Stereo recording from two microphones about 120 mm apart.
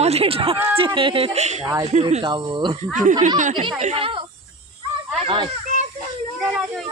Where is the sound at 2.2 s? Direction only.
40° right (ahead or behind).